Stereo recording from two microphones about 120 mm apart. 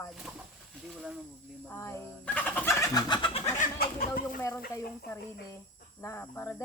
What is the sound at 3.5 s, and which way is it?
Bird, 90° left.